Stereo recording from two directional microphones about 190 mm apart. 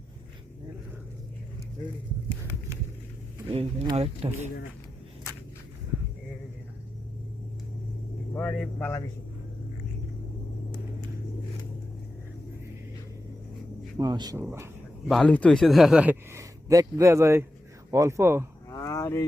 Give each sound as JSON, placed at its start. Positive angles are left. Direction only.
{"t": 3.5, "sound": "speech", "side_deg": -30}
{"t": 8.3, "sound": "speech", "side_deg": 10}
{"t": 14.0, "sound": "speech", "side_deg": -20}
{"t": 15.1, "sound": "speech", "side_deg": 5}
{"t": 18.7, "sound": "a sound", "side_deg": 15}